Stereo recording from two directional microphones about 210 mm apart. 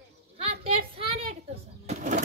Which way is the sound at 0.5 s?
25° right (ahead or behind).